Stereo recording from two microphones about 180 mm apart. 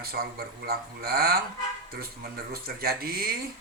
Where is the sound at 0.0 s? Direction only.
60° right (ahead or behind).